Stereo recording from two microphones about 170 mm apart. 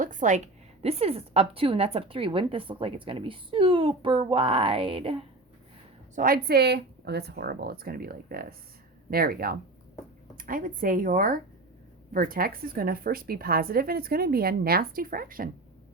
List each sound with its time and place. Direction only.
0.0 s a woman's voice: 50° right (ahead or behind); by 5.2 s 30° right (ahead or behind)
6.1 s a woman's voice: 60° right (ahead or behind)